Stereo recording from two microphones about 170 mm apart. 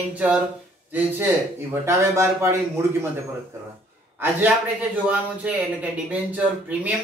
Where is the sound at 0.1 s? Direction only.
5° right (ahead or behind).